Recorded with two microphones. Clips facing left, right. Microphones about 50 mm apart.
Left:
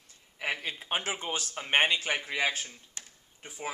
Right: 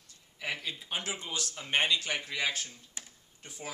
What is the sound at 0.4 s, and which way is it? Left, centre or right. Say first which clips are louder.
Speech: left 3 dB; left.